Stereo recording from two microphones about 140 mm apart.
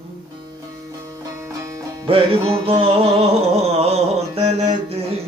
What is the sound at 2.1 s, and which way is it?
Music, 40° right (ahead or behind).